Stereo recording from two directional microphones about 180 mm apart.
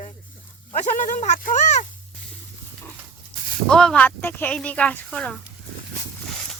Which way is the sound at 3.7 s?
5° left (ahead or behind).